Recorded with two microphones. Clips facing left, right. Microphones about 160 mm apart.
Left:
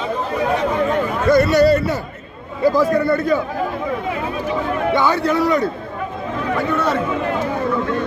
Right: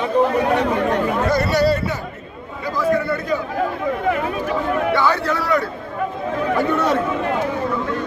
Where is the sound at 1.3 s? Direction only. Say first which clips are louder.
Left 7 dB; 50° left (ahead or behind).